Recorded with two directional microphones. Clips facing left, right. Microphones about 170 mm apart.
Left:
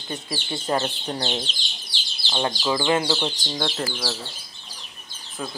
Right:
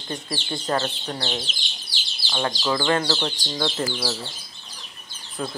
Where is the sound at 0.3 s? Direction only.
10° left (ahead or behind).